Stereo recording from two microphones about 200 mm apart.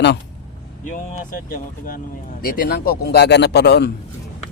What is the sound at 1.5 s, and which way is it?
A man's voice, 45° left (ahead or behind).